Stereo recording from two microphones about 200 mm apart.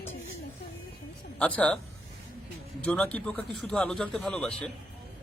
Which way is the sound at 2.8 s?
5° left (ahead or behind).